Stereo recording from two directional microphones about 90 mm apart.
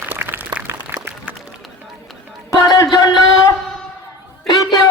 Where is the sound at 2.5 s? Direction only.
40° left (ahead or behind).